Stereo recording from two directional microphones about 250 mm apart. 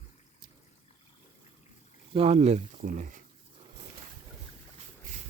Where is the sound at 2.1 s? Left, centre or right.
Right.